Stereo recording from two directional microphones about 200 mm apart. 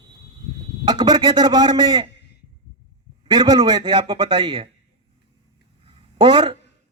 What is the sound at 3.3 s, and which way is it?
A man's voice, 20° right (ahead or behind).